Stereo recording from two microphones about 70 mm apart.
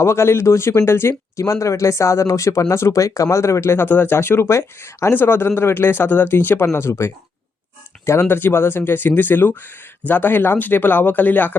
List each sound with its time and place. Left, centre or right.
0.0 s speech: left
1.5 s speech: left